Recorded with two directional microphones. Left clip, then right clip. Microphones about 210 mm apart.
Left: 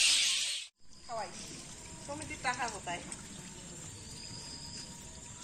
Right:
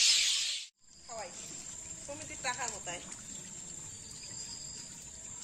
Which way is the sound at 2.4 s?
65° right (ahead or behind).